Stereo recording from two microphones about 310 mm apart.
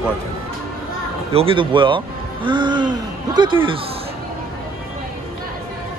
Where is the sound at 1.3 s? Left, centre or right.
Centre.